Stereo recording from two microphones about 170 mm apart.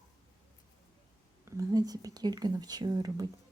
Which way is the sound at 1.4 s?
20° right (ahead or behind).